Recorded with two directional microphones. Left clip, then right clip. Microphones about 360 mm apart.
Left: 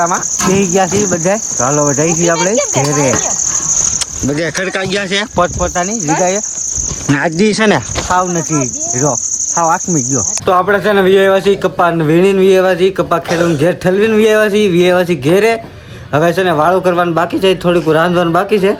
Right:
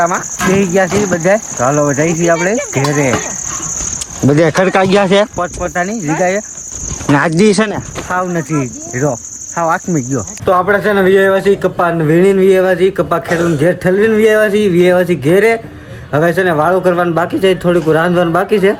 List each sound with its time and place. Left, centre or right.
0.0 s speech: centre
4.6 s speech: centre
7.3 s speech: centre
8.1 s cricket: centre
9.6 s speech: centre